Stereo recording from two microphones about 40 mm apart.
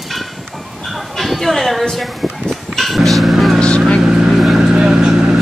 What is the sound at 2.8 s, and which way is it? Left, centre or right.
Music, centre.